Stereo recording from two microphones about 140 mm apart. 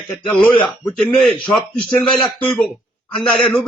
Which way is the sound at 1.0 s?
Centre (ahead or behind).